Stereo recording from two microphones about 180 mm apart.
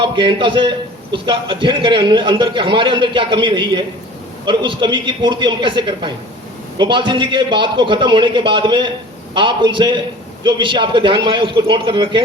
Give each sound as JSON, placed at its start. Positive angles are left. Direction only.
{"t": 0.0, "sound": "a man's voice", "side_deg": -25}